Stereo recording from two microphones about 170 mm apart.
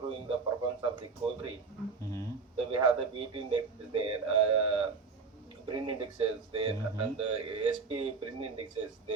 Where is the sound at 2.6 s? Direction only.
30° right (ahead or behind).